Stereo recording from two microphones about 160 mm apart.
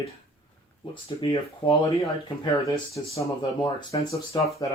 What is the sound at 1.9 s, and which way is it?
Speech, 20° left (ahead or behind).